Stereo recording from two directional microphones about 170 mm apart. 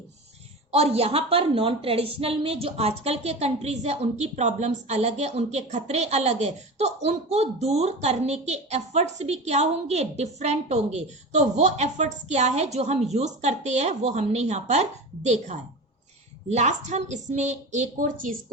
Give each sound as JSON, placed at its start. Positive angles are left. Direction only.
{"t": 0.7, "sound": "a woman's voice", "side_deg": -35}